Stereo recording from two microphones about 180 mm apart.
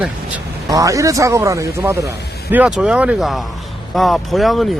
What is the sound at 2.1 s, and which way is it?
Speech, 65° left (ahead or behind).